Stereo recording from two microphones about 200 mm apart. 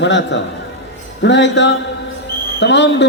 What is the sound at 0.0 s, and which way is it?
A man's voice, 65° left (ahead or behind).